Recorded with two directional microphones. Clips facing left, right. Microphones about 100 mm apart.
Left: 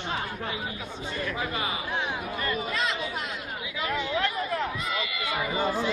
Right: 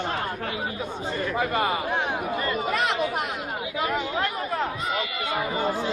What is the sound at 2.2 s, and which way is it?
Chatter, 30° right (ahead or behind).